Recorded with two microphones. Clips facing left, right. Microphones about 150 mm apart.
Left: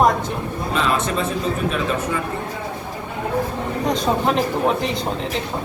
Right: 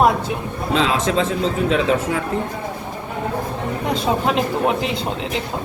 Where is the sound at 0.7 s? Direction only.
90° right.